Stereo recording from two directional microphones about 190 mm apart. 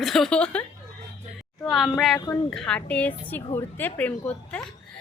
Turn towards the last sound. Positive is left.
turn(degrees=5)  # may be behind; listen again after turning